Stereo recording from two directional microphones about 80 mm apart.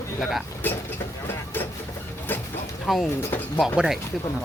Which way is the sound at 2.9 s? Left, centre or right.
Centre.